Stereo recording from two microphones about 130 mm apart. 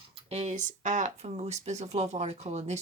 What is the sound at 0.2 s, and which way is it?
Speech, 55° right (ahead or behind).